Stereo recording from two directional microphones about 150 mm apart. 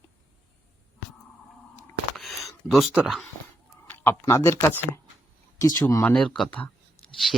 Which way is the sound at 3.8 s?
15° left (ahead or behind).